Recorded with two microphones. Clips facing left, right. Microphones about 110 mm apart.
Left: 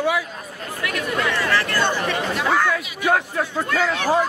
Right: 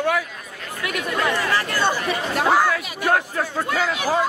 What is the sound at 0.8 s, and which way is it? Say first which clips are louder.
Speech: even; 15° right (ahead or behind).